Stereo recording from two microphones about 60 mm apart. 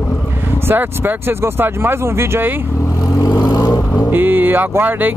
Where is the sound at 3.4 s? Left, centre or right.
Left.